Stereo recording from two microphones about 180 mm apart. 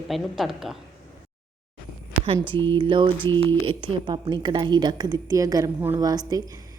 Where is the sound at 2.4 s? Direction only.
25° right (ahead or behind).